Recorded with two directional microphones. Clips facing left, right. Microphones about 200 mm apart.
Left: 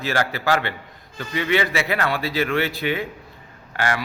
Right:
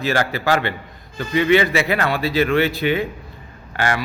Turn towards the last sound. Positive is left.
turn(degrees=-25)  # may be behind; listen again after turning